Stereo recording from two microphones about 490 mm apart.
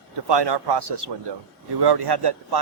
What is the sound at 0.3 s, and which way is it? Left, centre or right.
A man's voice, right.